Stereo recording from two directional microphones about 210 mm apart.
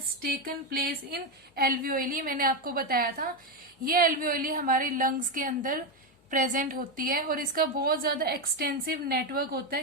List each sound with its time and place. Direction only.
0.2 s a woman's voice: 45° right (ahead or behind)